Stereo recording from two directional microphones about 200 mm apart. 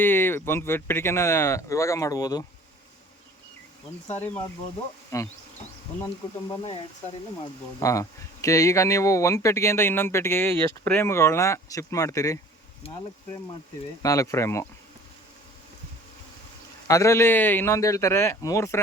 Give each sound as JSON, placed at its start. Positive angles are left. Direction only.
{"t": 0.0, "sound": "speech", "side_deg": 10}
{"t": 5.1, "sound": "speech", "side_deg": 15}
{"t": 6.5, "sound": "speech", "side_deg": 25}
{"t": 7.8, "sound": "speech", "side_deg": 15}
{"t": 12.8, "sound": "speech", "side_deg": 30}
{"t": 14.0, "sound": "speech", "side_deg": 15}
{"t": 16.9, "sound": "speech", "side_deg": 15}